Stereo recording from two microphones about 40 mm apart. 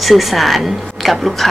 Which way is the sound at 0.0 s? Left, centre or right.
Centre.